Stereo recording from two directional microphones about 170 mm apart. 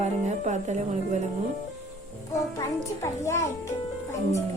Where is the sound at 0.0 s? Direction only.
45° right (ahead or behind).